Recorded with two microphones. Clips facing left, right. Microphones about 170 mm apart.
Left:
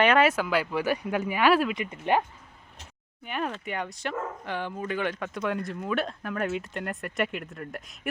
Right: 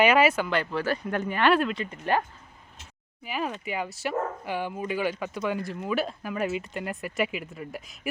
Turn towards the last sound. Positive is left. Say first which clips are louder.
# right 1 dB
turn(degrees=-5)  # may be behind; listen again after turning